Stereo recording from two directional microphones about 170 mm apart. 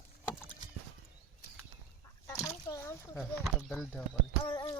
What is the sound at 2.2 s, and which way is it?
Chicken, 20° left (ahead or behind).